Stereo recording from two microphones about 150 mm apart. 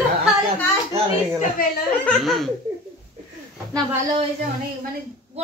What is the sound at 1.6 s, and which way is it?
Speech, 75° left (ahead or behind).